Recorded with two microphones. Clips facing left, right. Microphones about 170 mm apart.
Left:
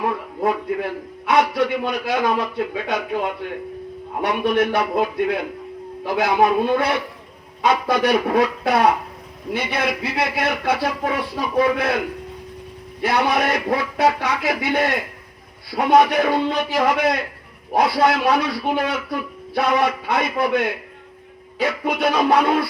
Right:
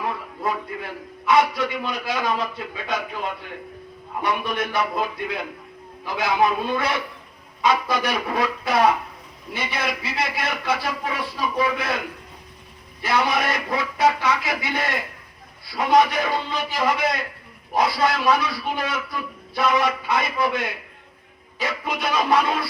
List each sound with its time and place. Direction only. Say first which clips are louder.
0.0 s a man's voice: left 5 dB; 55° left (ahead or behind)
4.2 s a man's voice: left 6 dB; 60° left (ahead or behind)
13.0 s a man's voice: left 3 dB; 60° left (ahead or behind)